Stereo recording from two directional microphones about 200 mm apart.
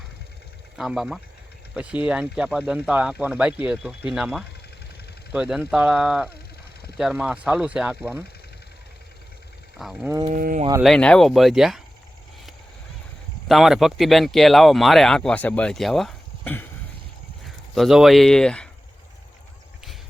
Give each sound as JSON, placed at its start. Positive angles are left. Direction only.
{"t": 0.8, "sound": "speech", "side_deg": -5}
{"t": 9.7, "sound": "speech", "side_deg": 0}
{"t": 10.2, "sound": "speech", "side_deg": -45}
{"t": 10.8, "sound": "speech", "side_deg": 5}
{"t": 13.5, "sound": "speech", "side_deg": 0}